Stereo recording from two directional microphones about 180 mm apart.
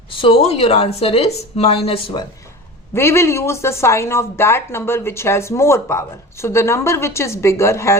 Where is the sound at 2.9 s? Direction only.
15° left (ahead or behind).